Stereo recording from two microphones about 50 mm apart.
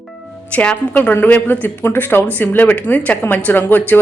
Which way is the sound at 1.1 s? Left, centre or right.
Left.